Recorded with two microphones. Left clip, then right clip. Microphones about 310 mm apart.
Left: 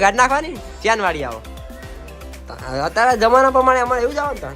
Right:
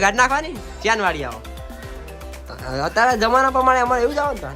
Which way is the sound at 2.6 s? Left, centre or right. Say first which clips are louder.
Left 1 dB; centre.